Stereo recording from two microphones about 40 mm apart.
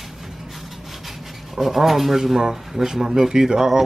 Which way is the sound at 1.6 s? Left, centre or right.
Centre.